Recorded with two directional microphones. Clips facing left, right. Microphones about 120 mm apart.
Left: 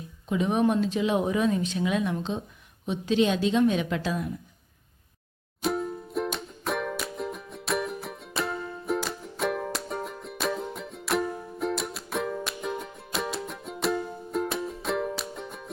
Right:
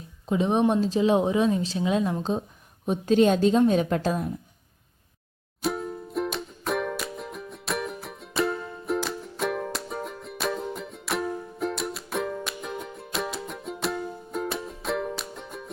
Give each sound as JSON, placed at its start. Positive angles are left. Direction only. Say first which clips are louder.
{"t": 0.3, "sound": "a woman's voice", "louder": "right 2 dB", "side_deg": -30}
{"t": 2.8, "sound": "a woman's voice", "louder": "right 4 dB", "side_deg": -45}
{"t": 5.6, "sound": "music", "louder": "left 1 dB", "side_deg": 0}